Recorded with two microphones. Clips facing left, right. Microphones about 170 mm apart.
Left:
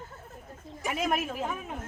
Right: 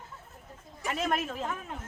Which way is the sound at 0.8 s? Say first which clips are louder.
Left 1 dB; 10° left (ahead or behind).